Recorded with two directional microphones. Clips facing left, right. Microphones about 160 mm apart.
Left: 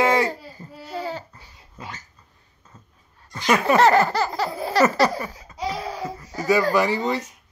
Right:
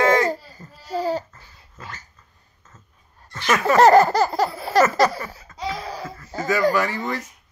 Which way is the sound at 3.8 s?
40° right (ahead or behind).